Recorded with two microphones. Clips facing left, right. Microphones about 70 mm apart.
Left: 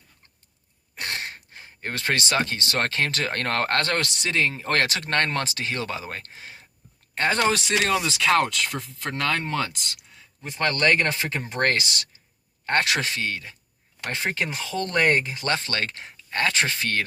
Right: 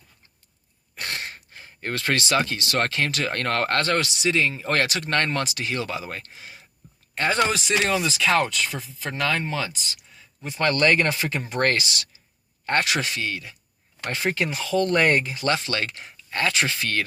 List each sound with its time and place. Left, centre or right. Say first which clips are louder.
0.9 s gasp: even; left
2.3 s speech: right 2 dB; left
7.5 s speech: even; left
10.6 s speech: right 1 dB; left
12.6 s speech: even; left
14.1 s speech: right 2 dB; left